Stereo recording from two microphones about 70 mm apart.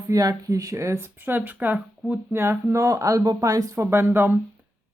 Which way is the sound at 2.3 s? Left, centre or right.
Right.